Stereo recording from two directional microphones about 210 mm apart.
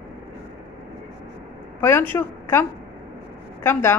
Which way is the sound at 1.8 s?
10° left (ahead or behind).